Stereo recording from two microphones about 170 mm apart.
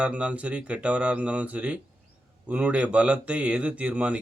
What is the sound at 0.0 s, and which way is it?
A man's voice, 5° right (ahead or behind).